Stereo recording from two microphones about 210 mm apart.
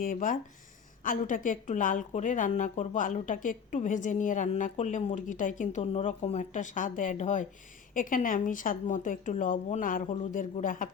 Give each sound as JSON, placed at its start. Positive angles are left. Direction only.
{"t": 0.0, "sound": "a woman's voice", "side_deg": 40}